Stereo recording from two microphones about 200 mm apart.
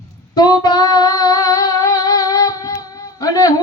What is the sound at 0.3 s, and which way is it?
Music, 20° left (ahead or behind).